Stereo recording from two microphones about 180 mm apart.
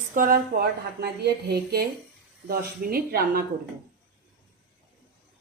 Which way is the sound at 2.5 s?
55° right (ahead or behind).